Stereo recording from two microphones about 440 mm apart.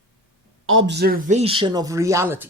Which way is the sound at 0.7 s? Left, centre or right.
Right.